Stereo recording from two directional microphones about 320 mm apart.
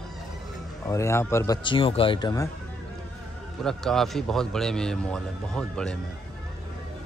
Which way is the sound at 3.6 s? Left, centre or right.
Centre.